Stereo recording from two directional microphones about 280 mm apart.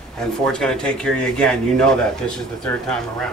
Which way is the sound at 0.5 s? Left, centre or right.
Centre.